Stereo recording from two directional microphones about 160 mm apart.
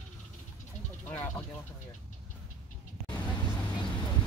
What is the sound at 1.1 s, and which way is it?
Vehicle, 10° left (ahead or behind).